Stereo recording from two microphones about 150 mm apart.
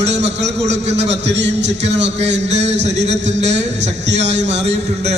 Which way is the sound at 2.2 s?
50° right (ahead or behind).